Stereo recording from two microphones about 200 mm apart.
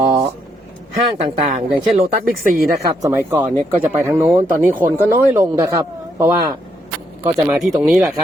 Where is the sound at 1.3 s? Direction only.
35° right (ahead or behind).